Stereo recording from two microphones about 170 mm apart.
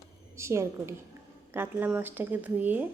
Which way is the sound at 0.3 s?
15° right (ahead or behind).